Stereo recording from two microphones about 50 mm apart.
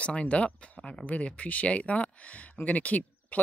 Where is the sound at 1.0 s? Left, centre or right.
Left.